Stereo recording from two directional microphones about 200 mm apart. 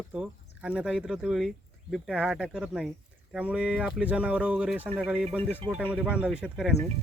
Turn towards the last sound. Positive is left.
turn(degrees=-5)  # may be behind; listen again after turning